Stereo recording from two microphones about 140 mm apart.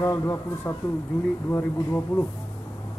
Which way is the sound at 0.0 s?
20° left (ahead or behind).